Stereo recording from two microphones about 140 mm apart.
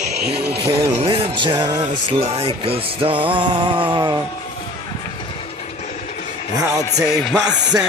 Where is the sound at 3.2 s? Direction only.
35° right (ahead or behind).